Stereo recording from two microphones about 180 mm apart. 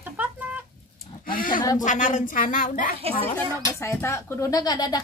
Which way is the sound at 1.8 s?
45° left (ahead or behind).